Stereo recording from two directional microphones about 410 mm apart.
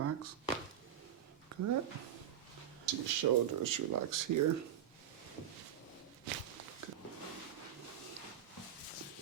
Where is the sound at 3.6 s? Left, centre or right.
Right.